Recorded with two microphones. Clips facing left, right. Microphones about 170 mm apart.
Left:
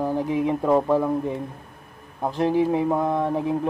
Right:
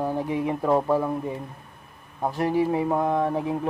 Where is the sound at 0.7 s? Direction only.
5° right (ahead or behind).